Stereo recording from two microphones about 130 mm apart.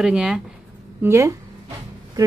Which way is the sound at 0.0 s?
5° right (ahead or behind).